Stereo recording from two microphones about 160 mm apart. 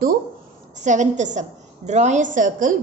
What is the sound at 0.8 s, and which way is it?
A woman's voice, 50° right (ahead or behind).